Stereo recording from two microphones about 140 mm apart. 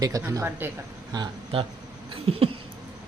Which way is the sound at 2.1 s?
45° right (ahead or behind).